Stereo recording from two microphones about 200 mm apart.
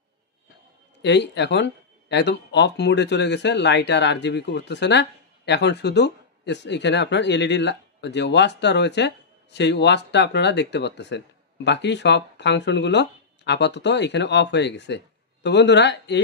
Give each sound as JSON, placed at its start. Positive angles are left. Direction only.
{"t": 1.0, "sound": "speech", "side_deg": 60}